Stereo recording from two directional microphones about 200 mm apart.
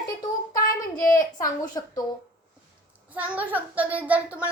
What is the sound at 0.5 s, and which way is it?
Child singing, 45° left (ahead or behind).